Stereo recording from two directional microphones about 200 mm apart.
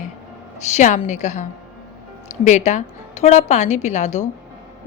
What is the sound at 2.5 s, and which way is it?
Speech, 35° left (ahead or behind).